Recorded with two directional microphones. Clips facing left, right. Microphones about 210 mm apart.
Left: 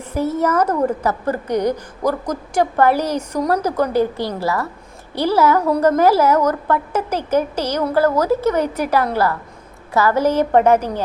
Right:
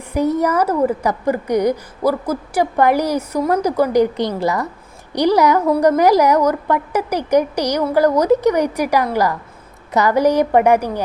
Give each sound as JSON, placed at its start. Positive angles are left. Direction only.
{"t": 0.1, "sound": "a woman's voice", "side_deg": -15}